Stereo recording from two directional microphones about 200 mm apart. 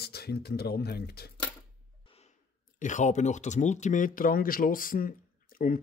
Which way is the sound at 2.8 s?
35° left (ahead or behind).